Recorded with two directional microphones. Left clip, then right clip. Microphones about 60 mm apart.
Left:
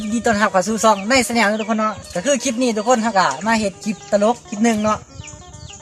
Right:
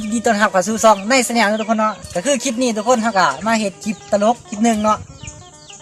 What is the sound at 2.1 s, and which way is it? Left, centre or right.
Speech, right.